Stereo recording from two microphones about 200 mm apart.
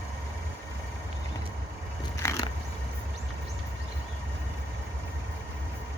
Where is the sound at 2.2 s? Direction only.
15° left (ahead or behind).